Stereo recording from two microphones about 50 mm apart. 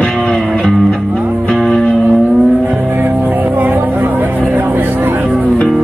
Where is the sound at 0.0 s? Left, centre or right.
Centre.